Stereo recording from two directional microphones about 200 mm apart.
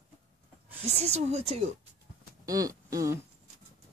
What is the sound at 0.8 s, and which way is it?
Speech, 35° right (ahead or behind).